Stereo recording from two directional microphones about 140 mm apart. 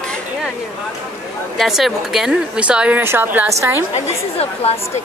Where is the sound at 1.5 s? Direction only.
Centre (ahead or behind).